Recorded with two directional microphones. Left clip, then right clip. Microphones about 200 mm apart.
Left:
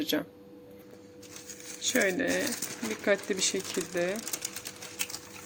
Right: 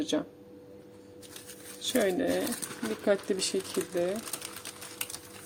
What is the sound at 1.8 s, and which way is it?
A woman's voice, 15° right (ahead or behind).